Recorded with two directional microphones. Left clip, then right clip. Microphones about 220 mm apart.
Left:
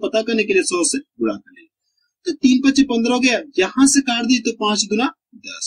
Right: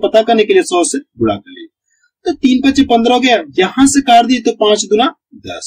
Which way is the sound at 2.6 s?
20° left (ahead or behind).